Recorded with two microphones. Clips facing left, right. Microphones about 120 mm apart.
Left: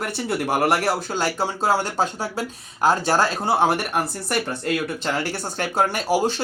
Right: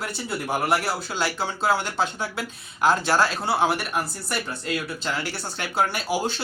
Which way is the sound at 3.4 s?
50° left (ahead or behind).